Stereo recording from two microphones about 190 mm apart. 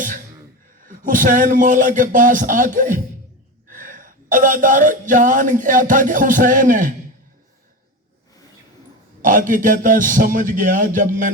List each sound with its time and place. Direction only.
0.9 s a man's voice: 45° right (ahead or behind)
9.2 s a man's voice: 45° right (ahead or behind)